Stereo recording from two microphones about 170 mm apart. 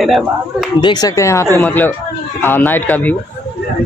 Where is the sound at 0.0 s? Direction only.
Centre (ahead or behind).